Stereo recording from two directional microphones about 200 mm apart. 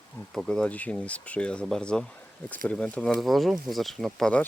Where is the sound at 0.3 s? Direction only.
Centre (ahead or behind).